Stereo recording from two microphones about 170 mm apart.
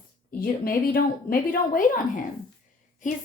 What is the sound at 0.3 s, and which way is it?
A woman's voice, 55° left (ahead or behind).